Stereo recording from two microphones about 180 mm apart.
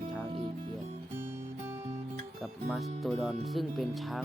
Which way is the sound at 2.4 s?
Centre (ahead or behind).